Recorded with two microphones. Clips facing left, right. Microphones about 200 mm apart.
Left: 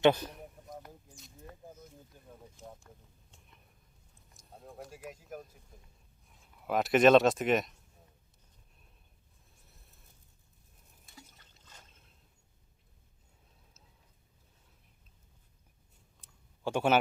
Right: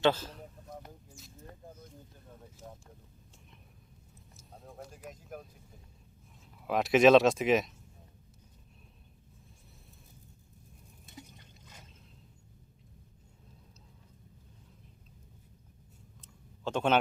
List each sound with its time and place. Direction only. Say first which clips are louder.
0.0 s a sound: left 3 dB; 15° left (ahead or behind)
1.6 s a sound: even; 5° left (ahead or behind)
4.4 s vehicle: left 1 dB; centre (ahead or behind)
6.6 s speech: right 1 dB; centre (ahead or behind)
11.0 s liquid: right 6 dB; 20° right (ahead or behind)
16.2 s clicking: left 1 dB; 10° left (ahead or behind)